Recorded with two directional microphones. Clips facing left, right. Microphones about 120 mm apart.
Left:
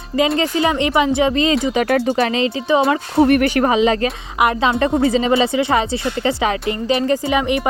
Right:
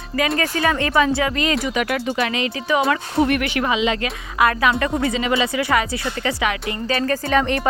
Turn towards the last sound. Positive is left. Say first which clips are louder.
# left 1 dB
turn(degrees=15)  # may be behind; listen again after turning